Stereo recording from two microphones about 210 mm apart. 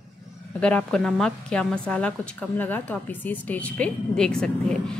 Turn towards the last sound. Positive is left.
turn(degrees=5)  # may be behind; listen again after turning